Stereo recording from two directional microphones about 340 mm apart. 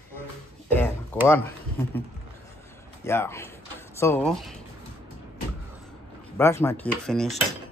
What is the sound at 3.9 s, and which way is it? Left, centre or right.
Speech, centre.